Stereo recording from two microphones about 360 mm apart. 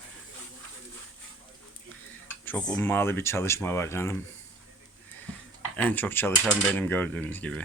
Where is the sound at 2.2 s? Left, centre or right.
Centre.